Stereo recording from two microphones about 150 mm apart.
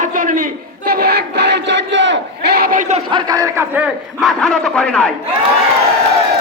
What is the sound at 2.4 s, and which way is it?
Battle cry, 90° right.